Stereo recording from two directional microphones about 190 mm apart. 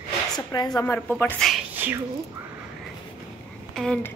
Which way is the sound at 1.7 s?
10° right (ahead or behind).